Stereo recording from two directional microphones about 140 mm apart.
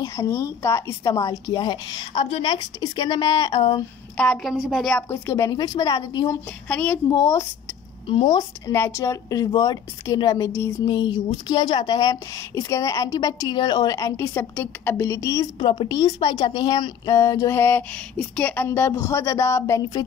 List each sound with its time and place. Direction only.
0.0 s a woman's voice: 20° left (ahead or behind)
4.2 s a woman's voice: 5° left (ahead or behind)
5.1 s speech: 20° left (ahead or behind)
7.1 s speech: 25° left (ahead or behind)
10.9 s speech: 35° left (ahead or behind)